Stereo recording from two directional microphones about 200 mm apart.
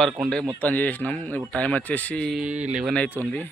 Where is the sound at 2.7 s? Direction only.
5° right (ahead or behind).